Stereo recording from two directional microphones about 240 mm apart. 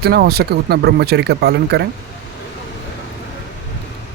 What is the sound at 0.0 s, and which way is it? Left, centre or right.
Speech, right.